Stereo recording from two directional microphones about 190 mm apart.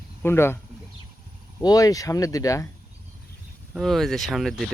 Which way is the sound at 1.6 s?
20° left (ahead or behind).